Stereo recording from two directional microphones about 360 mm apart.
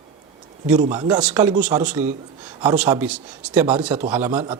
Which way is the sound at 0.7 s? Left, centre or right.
Centre.